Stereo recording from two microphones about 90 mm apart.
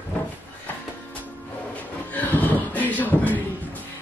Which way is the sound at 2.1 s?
20° left (ahead or behind).